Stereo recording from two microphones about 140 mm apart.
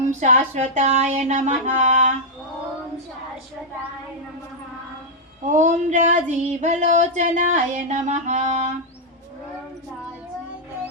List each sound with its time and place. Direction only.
0.0 s female singing: 60° right (ahead or behind)
5.5 s female singing: 60° right (ahead or behind)